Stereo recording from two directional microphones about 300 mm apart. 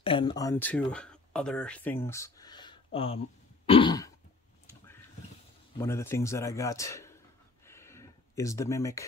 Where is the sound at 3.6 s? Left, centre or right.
Centre.